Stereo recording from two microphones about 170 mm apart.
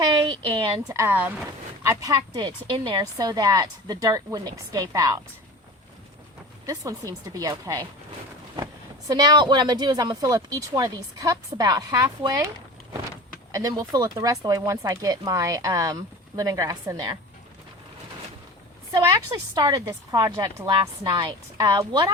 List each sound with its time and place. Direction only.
0.0 s a woman's voice: 25° right (ahead or behind)
6.7 s speech: 20° right (ahead or behind)
13.5 s speech: 20° right (ahead or behind)
18.9 s speech: 20° right (ahead or behind)